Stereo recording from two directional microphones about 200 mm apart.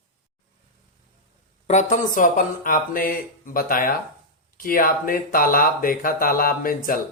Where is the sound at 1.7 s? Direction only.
40° left (ahead or behind).